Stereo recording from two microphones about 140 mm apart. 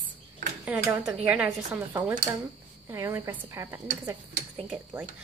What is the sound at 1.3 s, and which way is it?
A woman's voice, 10° right (ahead or behind).